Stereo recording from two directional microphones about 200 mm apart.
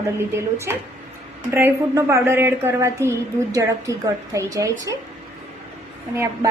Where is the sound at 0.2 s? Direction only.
10° right (ahead or behind).